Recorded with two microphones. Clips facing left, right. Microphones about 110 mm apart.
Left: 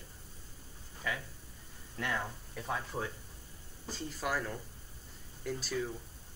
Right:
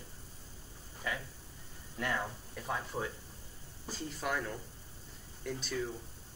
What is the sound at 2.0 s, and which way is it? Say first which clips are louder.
Speech: right 1 dB; centre (ahead or behind).